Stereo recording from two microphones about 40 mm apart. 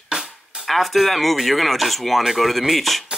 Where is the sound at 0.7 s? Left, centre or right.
Centre.